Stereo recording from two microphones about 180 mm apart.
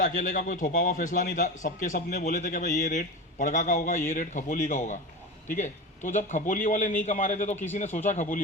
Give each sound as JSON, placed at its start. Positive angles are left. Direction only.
{"t": 0.0, "sound": "a man's voice", "side_deg": 45}
{"t": 7.5, "sound": "speech", "side_deg": 10}
{"t": 7.9, "sound": "speech", "side_deg": 40}